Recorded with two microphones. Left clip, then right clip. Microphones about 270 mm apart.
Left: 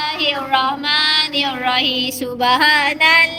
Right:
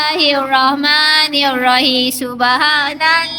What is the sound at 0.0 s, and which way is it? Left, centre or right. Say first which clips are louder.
Child singing: right 6 dB; centre.